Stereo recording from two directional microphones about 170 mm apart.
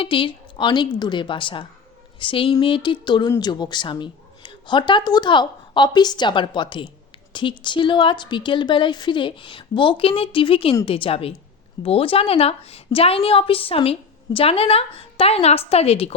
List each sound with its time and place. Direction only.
0.0 s a woman's voice: 30° left (ahead or behind)